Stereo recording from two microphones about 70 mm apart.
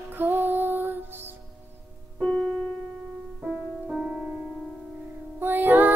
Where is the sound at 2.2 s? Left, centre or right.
Centre.